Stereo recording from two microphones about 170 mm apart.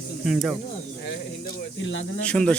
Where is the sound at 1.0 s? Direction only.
85° left.